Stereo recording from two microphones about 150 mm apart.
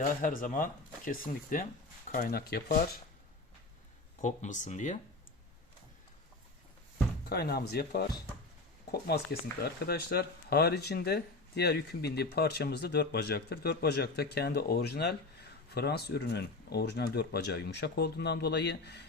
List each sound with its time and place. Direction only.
0.2 s speech: 65° left (ahead or behind)
2.1 s speech: 75° left (ahead or behind)
4.2 s speech: 55° left (ahead or behind)
7.3 s speech: 90° left